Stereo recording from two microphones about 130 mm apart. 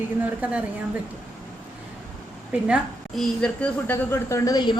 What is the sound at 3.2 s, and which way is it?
Speech, 5° left (ahead or behind).